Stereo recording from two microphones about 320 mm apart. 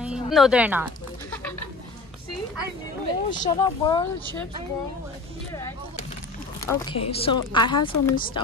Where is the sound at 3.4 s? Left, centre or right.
Centre.